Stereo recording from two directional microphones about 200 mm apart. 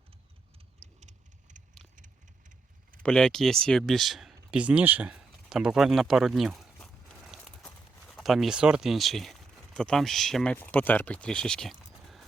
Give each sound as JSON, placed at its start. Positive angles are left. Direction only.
{"t": 0.9, "sound": "vehicle", "side_deg": -35}
{"t": 3.0, "sound": "speech", "side_deg": 5}